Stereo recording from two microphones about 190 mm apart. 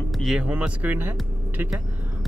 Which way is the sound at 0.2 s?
5° right (ahead or behind).